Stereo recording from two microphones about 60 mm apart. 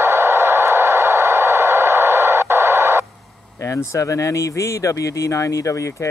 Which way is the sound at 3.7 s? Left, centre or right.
Left.